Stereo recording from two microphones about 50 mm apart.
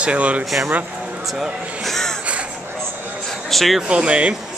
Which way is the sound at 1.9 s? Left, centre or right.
Centre.